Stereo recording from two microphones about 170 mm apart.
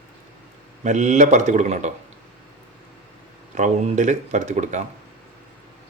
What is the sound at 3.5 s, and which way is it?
Speech, 45° right (ahead or behind).